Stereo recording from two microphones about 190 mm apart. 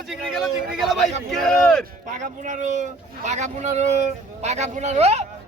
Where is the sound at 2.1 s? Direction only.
40° right (ahead or behind).